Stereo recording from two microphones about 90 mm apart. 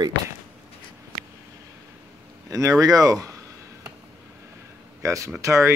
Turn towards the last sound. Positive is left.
turn(degrees=-30)  # may be behind; listen again after turning